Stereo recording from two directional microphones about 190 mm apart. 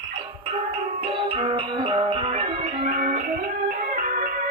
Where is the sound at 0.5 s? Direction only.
30° right (ahead or behind).